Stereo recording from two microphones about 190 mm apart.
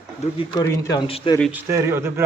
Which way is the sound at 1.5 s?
15° right (ahead or behind).